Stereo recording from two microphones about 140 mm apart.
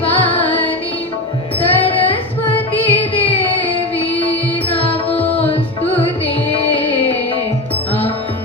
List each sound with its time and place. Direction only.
0.0 s music: 40° left (ahead or behind)
1.5 s music: 40° left (ahead or behind)
5.0 s music: 10° left (ahead or behind)
5.5 s music: 40° left (ahead or behind)